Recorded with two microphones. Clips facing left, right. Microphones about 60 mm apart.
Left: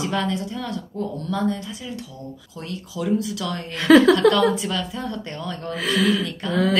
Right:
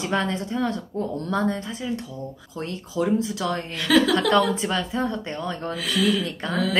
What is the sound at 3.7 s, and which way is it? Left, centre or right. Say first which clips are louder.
Speech: left 7 dB; left.